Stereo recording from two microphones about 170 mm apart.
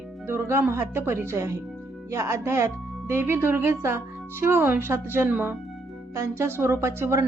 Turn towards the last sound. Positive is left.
turn(degrees=-15)  # may be behind; listen again after turning